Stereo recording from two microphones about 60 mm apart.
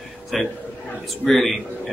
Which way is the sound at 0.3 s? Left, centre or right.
Centre.